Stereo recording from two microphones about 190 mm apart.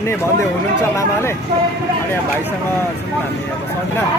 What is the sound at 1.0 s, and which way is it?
Speech, 15° left (ahead or behind).